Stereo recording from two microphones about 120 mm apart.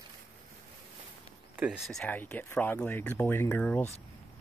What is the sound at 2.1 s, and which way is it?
Speech, 15° left (ahead or behind).